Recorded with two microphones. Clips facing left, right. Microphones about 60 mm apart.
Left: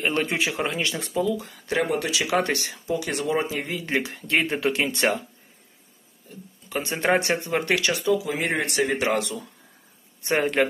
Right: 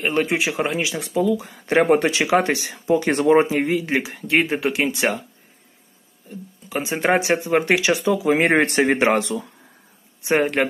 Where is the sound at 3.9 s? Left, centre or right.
Centre.